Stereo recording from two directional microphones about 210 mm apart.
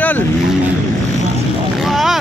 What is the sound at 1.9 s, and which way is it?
Boat, centre (ahead or behind).